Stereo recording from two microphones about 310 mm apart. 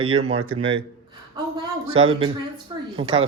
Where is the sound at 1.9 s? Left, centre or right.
Centre.